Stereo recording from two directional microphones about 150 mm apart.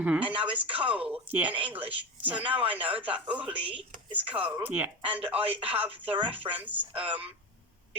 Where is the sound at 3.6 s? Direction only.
35° right (ahead or behind).